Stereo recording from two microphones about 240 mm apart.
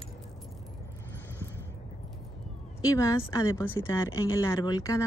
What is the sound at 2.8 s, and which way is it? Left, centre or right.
Speech, centre.